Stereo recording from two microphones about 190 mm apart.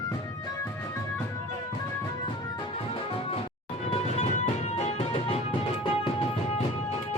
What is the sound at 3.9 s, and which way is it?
Music, 35° left (ahead or behind).